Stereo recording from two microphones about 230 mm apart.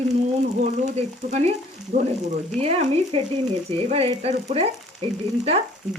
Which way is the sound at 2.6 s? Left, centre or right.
Right.